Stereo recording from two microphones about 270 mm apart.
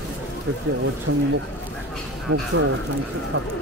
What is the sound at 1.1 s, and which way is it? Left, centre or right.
Speech, right.